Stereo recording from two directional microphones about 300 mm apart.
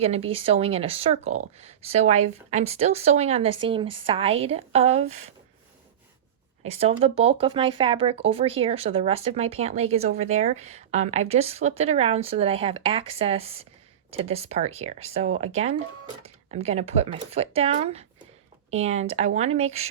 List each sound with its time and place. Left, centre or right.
0.0 s speech: centre
6.7 s speech: centre